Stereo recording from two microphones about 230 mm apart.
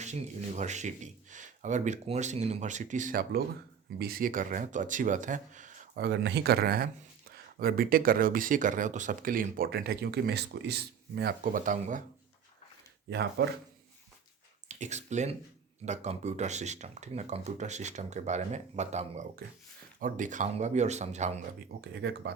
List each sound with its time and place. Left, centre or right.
0.0 s speech: right
13.1 s speech: right
14.7 s speech: right
21.8 s speech: right